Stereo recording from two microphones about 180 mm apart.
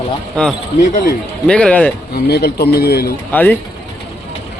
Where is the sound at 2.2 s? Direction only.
65° left (ahead or behind).